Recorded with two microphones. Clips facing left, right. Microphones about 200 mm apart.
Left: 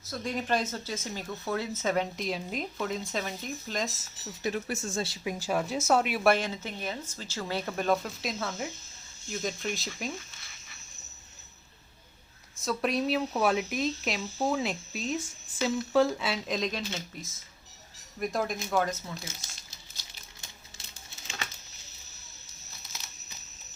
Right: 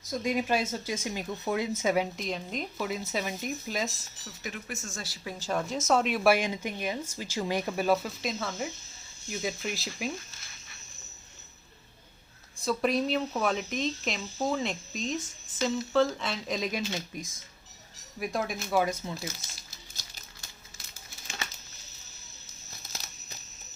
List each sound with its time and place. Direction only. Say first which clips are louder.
0.0 s speech: right 4 dB; 15° right (ahead or behind)
2.1 s speech: left 1 dB; centre (ahead or behind)
4.4 s speech: left 7 dB; 35° left (ahead or behind)
5.2 s speech: right 1 dB; 15° left (ahead or behind)
6.3 s speech: right 2 dB; 15° right (ahead or behind)
12.5 s speech: right 2 dB; centre (ahead or behind)
18.2 s speech: left 1 dB; centre (ahead or behind)
19.3 s speech: right 5 dB; 25° left (ahead or behind)